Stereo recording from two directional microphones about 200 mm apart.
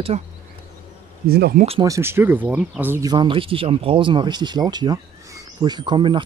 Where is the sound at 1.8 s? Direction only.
15° right (ahead or behind).